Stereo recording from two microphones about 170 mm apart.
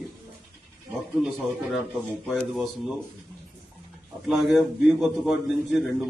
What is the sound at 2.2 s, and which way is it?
Speech, centre (ahead or behind).